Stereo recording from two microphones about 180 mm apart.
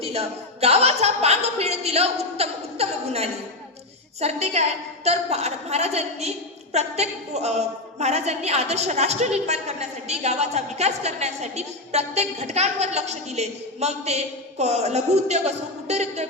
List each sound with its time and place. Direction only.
0.0 s a woman's voice: 35° right (ahead or behind)